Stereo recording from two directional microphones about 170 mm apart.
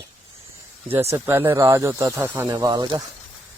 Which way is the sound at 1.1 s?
15° right (ahead or behind).